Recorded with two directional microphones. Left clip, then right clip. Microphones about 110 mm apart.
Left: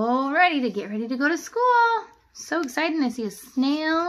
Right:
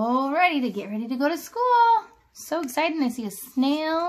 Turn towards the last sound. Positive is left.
turn(degrees=-50)  # may be behind; listen again after turning